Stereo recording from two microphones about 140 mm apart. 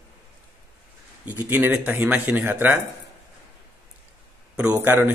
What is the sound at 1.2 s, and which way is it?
Speech, 15° right (ahead or behind).